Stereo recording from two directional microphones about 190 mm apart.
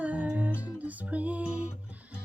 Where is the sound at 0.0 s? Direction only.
5° right (ahead or behind).